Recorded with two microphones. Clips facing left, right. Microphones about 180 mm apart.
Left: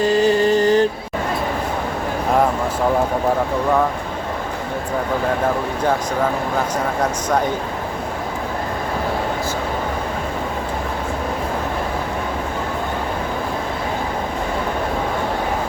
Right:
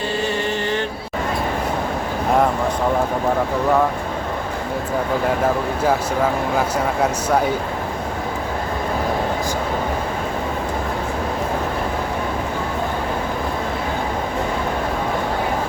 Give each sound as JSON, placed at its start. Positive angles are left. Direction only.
{"t": 0.0, "sound": "mantra", "side_deg": 40}
{"t": 7.0, "sound": "speech", "side_deg": -10}